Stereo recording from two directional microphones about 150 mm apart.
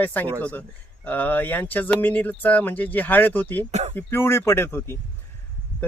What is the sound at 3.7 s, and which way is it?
Speech, 50° right (ahead or behind).